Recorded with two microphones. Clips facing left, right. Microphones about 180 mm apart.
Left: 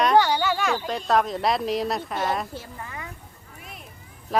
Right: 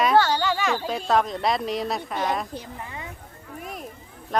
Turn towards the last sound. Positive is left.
turn(degrees=5)  # may be behind; listen again after turning